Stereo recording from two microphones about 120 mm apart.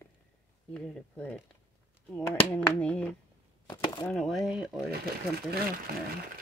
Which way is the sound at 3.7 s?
35° left (ahead or behind).